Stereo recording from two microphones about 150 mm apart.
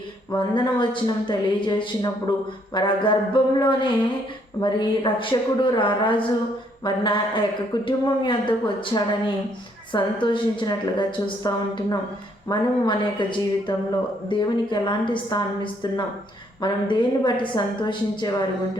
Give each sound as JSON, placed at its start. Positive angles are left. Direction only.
{"t": 0.3, "sound": "a woman's voice", "side_deg": 35}